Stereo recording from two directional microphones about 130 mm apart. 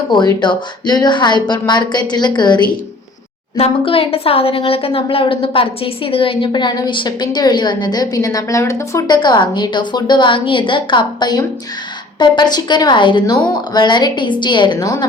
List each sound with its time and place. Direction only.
0.1 s a woman's voice: 35° left (ahead or behind)
3.6 s a woman's voice: 50° left (ahead or behind)